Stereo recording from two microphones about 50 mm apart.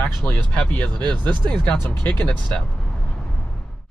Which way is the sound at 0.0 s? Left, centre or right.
Left.